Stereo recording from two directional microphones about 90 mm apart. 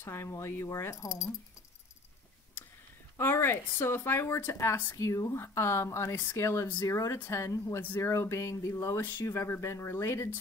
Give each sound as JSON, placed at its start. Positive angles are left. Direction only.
{"t": 0.0, "sound": "speech", "side_deg": 30}
{"t": 3.2, "sound": "speech", "side_deg": 25}